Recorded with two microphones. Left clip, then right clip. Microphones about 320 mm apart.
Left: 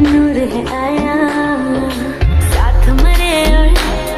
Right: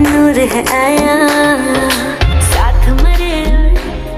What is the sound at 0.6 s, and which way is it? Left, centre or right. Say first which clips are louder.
Music: right 6 dB; right.